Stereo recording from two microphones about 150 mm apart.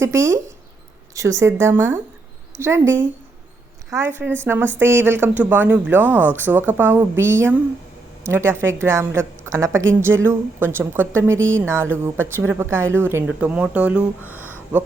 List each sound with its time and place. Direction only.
0.0 s a woman's voice: 15° right (ahead or behind)